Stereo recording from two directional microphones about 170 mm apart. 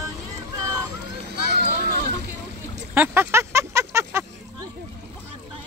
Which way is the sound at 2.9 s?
10° right (ahead or behind).